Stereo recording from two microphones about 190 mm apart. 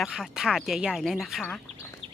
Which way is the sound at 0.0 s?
Centre (ahead or behind).